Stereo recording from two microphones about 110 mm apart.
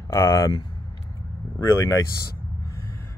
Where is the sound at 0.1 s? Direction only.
30° left (ahead or behind).